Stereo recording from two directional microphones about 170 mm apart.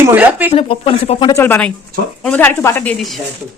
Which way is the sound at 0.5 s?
30° left (ahead or behind).